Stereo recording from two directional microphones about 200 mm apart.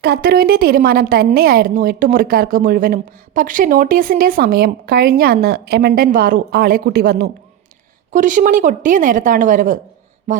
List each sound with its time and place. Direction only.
0.0 s a woman's voice: 50° right (ahead or behind)
8.1 s speech: 40° right (ahead or behind)